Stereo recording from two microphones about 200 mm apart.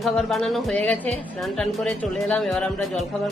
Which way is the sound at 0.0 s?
Centre (ahead or behind).